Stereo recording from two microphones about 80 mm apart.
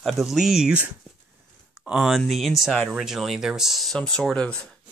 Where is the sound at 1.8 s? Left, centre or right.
Centre.